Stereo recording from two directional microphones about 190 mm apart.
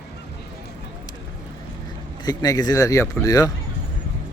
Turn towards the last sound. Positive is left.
turn(degrees=20)  # may be behind; listen again after turning